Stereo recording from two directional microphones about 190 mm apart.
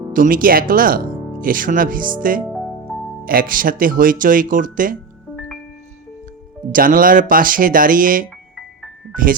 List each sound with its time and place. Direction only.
0.1 s speech: 45° right (ahead or behind)
6.7 s speech: 45° right (ahead or behind)